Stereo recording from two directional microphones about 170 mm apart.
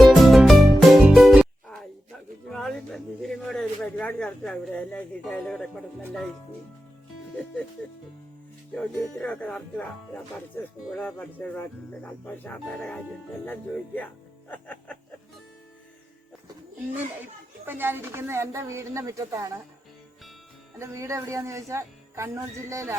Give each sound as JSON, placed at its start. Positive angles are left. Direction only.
{"t": 0.0, "sound": "music", "side_deg": 0}
{"t": 2.5, "sound": "a sound", "side_deg": 0}
{"t": 8.7, "sound": "speech", "side_deg": 10}
{"t": 10.8, "sound": "speech", "side_deg": 5}
{"t": 17.7, "sound": "speech", "side_deg": -10}
{"t": 20.7, "sound": "speech", "side_deg": -15}